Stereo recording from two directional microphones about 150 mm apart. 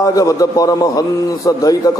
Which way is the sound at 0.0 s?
20° left (ahead or behind).